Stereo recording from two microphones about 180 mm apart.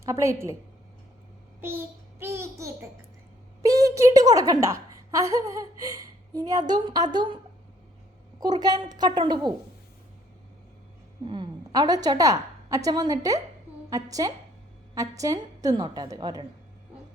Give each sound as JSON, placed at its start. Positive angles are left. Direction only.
{"t": 0.0, "sound": "a woman's voice", "side_deg": -15}
{"t": 1.6, "sound": "babbling", "side_deg": -15}
{"t": 3.6, "sound": "a woman's voice", "side_deg": -20}
{"t": 8.4, "sound": "a woman's voice", "side_deg": -20}
{"t": 11.3, "sound": "a woman's voice", "side_deg": -25}